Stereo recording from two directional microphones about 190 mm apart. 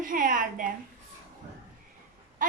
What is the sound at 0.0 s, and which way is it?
Speech, 45° right (ahead or behind).